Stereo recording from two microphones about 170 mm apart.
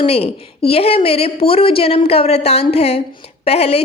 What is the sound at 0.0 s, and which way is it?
A woman's voice, 35° left (ahead or behind).